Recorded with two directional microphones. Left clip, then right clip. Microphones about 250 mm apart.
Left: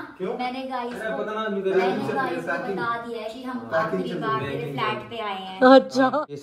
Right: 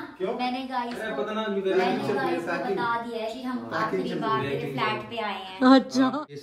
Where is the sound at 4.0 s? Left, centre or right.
Centre.